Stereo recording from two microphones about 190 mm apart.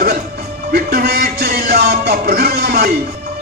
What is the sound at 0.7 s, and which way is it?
Music, 55° right (ahead or behind).